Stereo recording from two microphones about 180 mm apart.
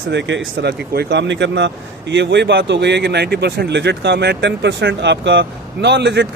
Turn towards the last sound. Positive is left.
turn(degrees=-75)  # may be behind; listen again after turning